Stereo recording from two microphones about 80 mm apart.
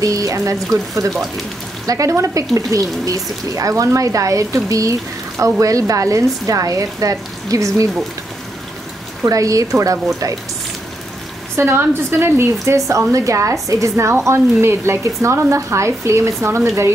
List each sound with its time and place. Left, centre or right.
0.0 s speech: right
1.1 s speech: centre
1.9 s speech: right
9.2 s speech: right
11.5 s a woman's voice: right